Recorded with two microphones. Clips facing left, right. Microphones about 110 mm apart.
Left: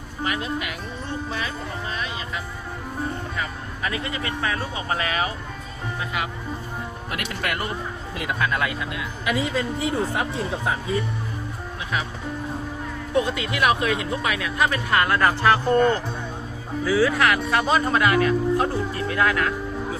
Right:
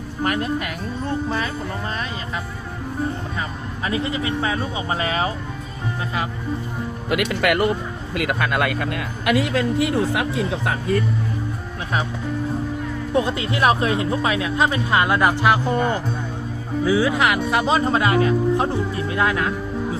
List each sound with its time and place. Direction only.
0.3 s speech: 45° right (ahead or behind)
3.8 s speech: 25° right (ahead or behind)
7.1 s speech: 90° right
8.1 s speech: 70° right (ahead or behind)
13.1 s speech: 30° right (ahead or behind)